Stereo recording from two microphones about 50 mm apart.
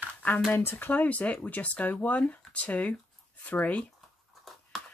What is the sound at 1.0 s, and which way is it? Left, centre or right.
Speech, left.